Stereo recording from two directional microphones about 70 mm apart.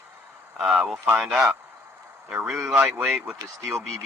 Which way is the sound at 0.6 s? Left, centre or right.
Centre.